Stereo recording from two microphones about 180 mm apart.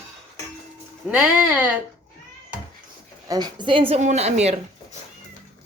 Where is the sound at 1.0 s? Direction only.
5° right (ahead or behind).